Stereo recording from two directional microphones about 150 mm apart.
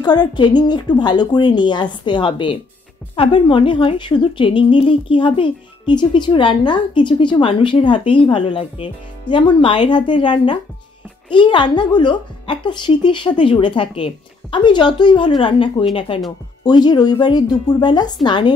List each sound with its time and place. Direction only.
0.0 s a woman's voice: 30° left (ahead or behind)